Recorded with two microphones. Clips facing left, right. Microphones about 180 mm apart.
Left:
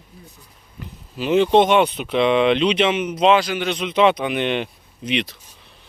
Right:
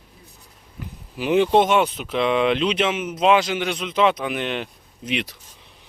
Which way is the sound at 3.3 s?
20° right (ahead or behind).